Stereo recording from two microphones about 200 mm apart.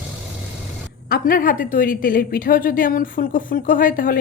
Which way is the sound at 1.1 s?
45° left (ahead or behind).